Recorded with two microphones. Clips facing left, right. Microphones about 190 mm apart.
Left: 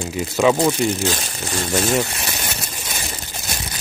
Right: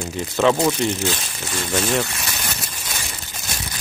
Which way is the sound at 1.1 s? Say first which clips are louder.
Left 3 dB; 40° left (ahead or behind).